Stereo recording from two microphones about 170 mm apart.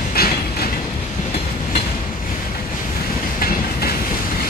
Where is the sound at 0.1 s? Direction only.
65° left (ahead or behind).